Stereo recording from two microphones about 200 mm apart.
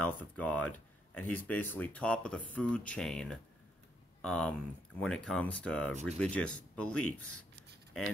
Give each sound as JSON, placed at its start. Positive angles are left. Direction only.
{"t": 0.2, "sound": "speech", "side_deg": 5}
{"t": 7.0, "sound": "speech", "side_deg": 90}